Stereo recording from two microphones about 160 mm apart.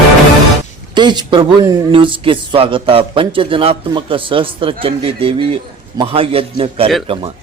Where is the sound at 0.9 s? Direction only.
30° right (ahead or behind).